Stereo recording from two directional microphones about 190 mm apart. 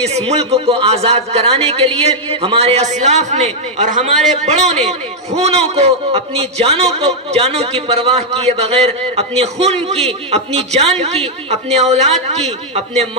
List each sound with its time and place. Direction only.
0.1 s a man's voice: 35° right (ahead or behind)